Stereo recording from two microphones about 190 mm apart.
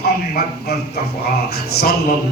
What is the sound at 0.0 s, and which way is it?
Speech, 55° left (ahead or behind).